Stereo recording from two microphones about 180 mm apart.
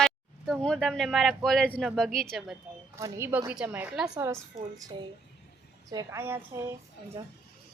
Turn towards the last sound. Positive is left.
turn(degrees=-15)  # may be behind; listen again after turning